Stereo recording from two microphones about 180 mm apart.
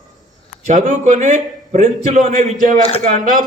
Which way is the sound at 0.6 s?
45° right (ahead or behind).